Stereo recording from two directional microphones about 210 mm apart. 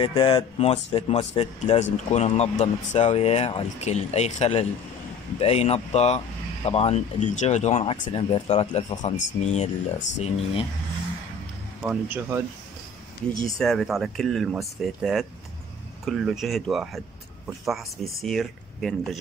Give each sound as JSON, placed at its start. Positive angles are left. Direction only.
{"t": 0.0, "sound": "speech", "side_deg": 25}
{"t": 11.8, "sound": "speech", "side_deg": -5}
{"t": 13.6, "sound": "speech", "side_deg": 0}
{"t": 18.2, "sound": "speech", "side_deg": 0}